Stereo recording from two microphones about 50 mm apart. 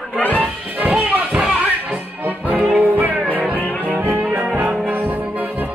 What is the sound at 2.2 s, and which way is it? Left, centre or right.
Music, right.